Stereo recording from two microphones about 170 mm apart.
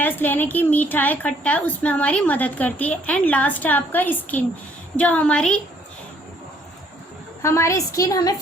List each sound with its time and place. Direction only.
0.0 s a woman's voice: 10° left (ahead or behind)
7.4 s a woman's voice: 15° left (ahead or behind)